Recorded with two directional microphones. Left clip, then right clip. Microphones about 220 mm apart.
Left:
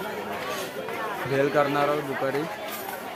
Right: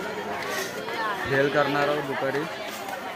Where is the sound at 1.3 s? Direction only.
Centre (ahead or behind).